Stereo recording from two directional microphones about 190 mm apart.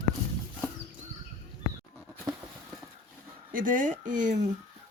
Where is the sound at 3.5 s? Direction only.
45° right (ahead or behind).